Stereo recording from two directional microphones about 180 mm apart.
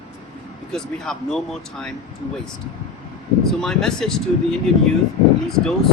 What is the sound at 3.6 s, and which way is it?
Speech, 5° left (ahead or behind).